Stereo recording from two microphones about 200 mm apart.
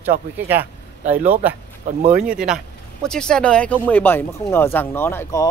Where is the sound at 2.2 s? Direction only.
5° right (ahead or behind); by 5.5 s 15° left (ahead or behind).